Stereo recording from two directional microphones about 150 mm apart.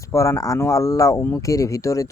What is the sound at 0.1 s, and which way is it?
Speech, 20° left (ahead or behind).